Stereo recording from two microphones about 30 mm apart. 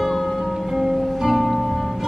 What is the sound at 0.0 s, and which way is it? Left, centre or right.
Music, centre.